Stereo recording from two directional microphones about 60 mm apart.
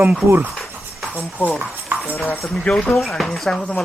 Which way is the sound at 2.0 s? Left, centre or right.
Left.